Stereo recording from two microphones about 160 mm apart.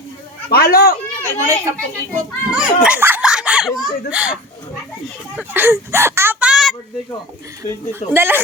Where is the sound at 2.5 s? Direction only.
5° right (ahead or behind).